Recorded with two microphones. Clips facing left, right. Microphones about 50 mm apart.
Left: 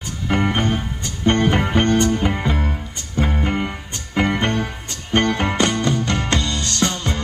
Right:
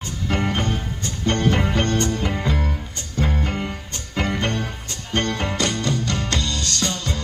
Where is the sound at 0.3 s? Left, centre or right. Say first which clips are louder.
Left 4 dB; left.